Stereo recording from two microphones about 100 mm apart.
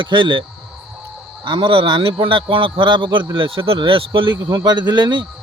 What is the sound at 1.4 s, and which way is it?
Speech, 55° right (ahead or behind).